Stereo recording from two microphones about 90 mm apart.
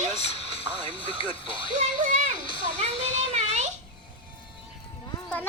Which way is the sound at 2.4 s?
70° left (ahead or behind).